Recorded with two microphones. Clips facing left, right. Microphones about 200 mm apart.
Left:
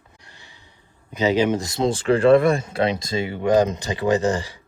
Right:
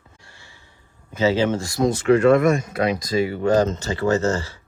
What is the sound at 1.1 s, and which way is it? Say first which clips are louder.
Speech: even; 15° left (ahead or behind).